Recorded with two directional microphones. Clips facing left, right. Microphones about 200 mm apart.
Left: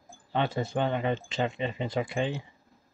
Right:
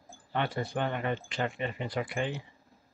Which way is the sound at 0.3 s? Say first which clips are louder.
Left 3 dB; 25° left (ahead or behind).